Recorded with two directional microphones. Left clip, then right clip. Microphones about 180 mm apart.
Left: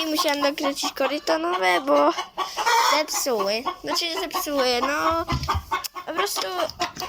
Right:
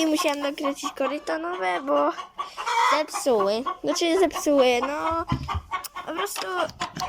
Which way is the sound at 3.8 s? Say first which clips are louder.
Right 4 dB; 35° right (ahead or behind).